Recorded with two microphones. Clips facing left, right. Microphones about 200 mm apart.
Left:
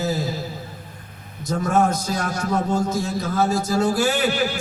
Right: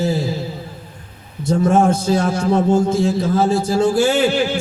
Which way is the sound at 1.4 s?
30° right (ahead or behind).